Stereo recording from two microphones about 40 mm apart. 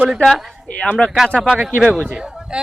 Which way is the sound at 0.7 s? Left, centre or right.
Left.